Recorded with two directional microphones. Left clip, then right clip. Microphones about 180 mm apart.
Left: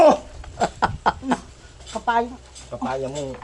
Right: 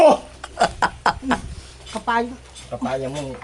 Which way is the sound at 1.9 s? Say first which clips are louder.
Even; 50° right (ahead or behind).